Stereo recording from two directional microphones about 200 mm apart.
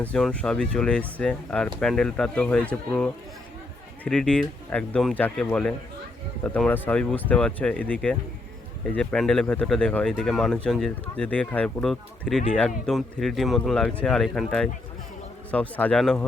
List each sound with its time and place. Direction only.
0.0 s speech: 5° left (ahead or behind)